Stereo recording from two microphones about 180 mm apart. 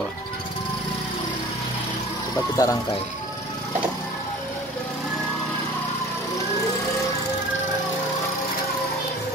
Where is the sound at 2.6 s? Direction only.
20° left (ahead or behind).